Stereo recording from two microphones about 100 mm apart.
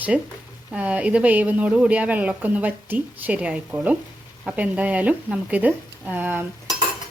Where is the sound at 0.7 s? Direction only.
15° right (ahead or behind).